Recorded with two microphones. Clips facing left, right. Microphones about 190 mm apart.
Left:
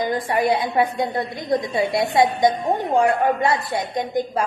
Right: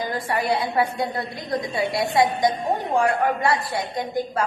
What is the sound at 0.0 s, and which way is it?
A woman's voice, 20° left (ahead or behind).